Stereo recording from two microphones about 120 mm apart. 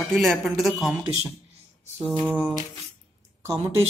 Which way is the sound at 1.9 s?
15° right (ahead or behind).